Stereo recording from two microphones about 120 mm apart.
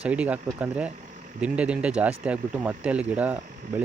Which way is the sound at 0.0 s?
10° right (ahead or behind).